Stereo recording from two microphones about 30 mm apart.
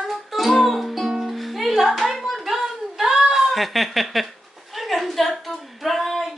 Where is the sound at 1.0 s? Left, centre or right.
Centre.